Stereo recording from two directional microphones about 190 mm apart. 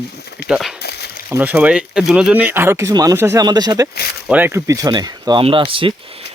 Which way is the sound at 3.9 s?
55° left (ahead or behind).